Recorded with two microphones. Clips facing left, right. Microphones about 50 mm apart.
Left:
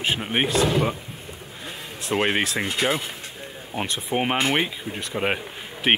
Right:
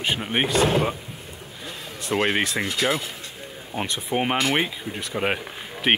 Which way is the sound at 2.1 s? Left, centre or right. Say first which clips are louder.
Even; centre.